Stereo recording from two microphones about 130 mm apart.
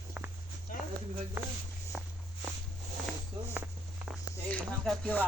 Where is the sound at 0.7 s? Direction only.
90° left.